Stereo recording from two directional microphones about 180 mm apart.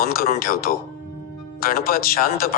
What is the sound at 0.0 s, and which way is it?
Speech, 55° left (ahead or behind).